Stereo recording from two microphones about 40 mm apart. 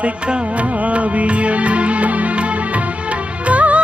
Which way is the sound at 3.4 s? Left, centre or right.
Right.